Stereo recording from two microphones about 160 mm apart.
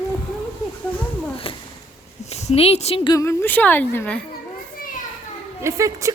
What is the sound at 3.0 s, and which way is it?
A woman's voice, 20° left (ahead or behind).